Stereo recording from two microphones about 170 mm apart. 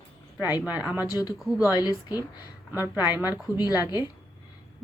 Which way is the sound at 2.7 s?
10° right (ahead or behind).